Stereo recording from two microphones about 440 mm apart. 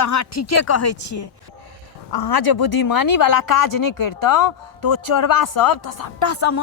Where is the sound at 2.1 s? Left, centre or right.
Left.